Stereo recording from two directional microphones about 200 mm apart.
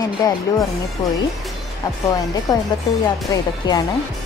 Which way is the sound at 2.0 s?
20° left (ahead or behind).